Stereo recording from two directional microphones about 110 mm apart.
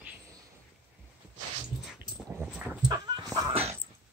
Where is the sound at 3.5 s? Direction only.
60° right (ahead or behind).